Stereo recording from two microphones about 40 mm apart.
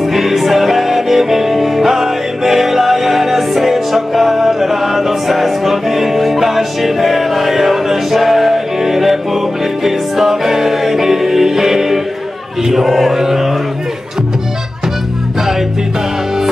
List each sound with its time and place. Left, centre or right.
0.0 s music: centre
12.6 s mantra: centre